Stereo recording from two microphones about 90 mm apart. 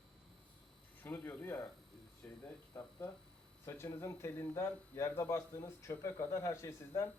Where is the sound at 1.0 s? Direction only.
25° left (ahead or behind).